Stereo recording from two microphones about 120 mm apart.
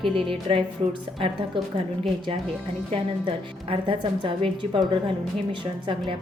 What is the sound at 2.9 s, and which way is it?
A woman's voice, 50° right (ahead or behind).